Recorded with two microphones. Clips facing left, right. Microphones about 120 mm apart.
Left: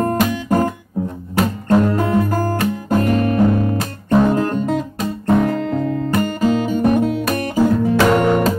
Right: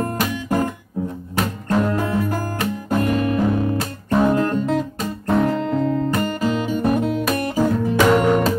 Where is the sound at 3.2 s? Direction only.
Centre (ahead or behind).